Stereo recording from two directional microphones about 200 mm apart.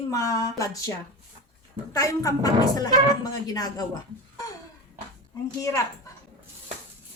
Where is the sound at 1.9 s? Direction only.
15° left (ahead or behind).